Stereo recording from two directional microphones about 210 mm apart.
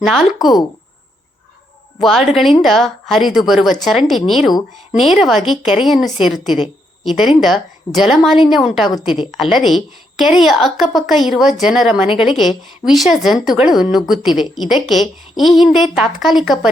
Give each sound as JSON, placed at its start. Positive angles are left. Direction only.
{"t": 2.0, "sound": "a woman's voice", "side_deg": 0}
{"t": 8.9, "sound": "a woman's voice", "side_deg": 20}
{"t": 9.4, "sound": "speech", "side_deg": 0}